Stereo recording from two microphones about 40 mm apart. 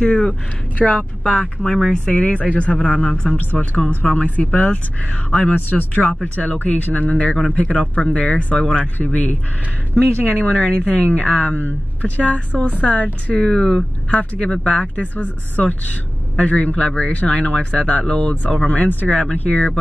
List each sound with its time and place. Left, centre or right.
0.0 s speech: left
1.7 s speech: centre
2.0 s a woman's voice: left
5.5 s a woman's voice: left
10.5 s a woman's voice: left
11.5 s a woman's voice: left
19.0 s speech: left